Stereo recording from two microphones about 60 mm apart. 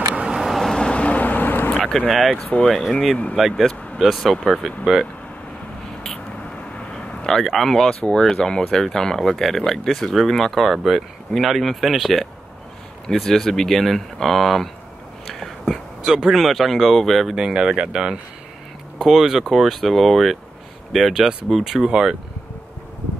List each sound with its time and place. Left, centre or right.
0.3 s vehicle: centre
0.7 s vehicle: centre
1.8 s speech: centre
7.2 s speech: centre
7.9 s speech: centre
15.2 s whispering: centre
16.0 s speech: centre
17.4 s speech: centre